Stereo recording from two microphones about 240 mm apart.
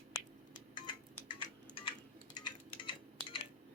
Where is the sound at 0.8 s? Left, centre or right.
Centre.